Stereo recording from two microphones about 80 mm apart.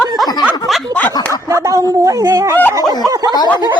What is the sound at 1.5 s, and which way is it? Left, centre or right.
Speech, right.